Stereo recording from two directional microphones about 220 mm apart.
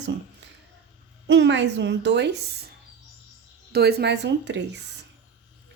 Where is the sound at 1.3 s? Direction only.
55° right (ahead or behind).